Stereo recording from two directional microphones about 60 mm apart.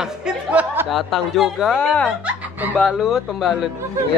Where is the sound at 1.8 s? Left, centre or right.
Left.